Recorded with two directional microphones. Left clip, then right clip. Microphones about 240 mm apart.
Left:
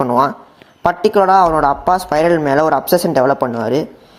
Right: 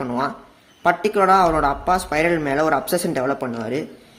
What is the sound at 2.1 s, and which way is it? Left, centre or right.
A man's voice, centre.